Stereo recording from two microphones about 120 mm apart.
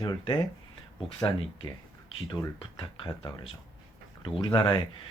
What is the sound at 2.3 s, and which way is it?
Speech, 35° left (ahead or behind).